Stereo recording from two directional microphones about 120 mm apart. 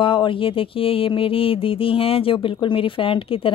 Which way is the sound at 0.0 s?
45° left (ahead or behind).